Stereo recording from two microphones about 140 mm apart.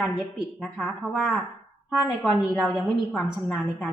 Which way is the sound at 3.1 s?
10° left (ahead or behind).